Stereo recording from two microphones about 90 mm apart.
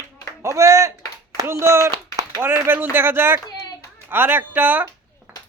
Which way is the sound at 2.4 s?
25° right (ahead or behind).